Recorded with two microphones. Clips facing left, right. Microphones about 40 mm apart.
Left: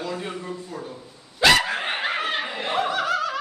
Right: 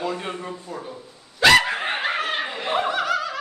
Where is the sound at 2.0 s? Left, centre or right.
Centre.